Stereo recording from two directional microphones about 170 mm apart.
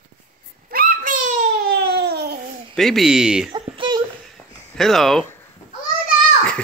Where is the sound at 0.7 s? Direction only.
60° right (ahead or behind).